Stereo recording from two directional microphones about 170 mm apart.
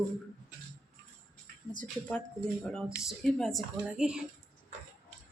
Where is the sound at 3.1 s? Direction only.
Centre (ahead or behind).